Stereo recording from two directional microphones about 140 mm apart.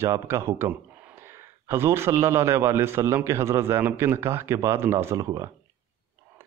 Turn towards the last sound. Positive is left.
turn(degrees=-25)  # may be behind; listen again after turning